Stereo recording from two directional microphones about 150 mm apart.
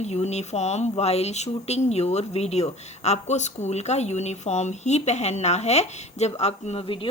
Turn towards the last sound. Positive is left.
turn(degrees=40)  # may be behind; listen again after turning